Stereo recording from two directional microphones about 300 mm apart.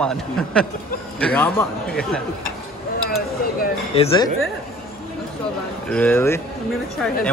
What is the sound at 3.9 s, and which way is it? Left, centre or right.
Speech, centre.